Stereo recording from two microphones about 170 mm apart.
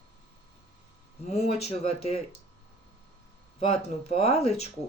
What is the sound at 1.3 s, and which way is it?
Speech, 35° left (ahead or behind).